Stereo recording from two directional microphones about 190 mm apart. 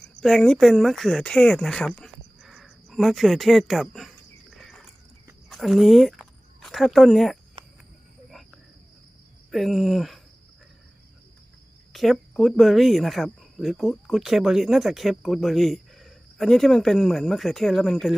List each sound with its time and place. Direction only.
0.0 s speech: 5° left (ahead or behind)
2.0 s a sound: centre (ahead or behind)
5.5 s speech: centre (ahead or behind)
7.6 s cricket: 25° right (ahead or behind)
9.5 s speech: centre (ahead or behind)
11.9 s speech: centre (ahead or behind)